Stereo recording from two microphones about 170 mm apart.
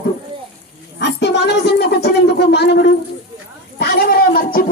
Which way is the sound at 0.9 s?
90° left.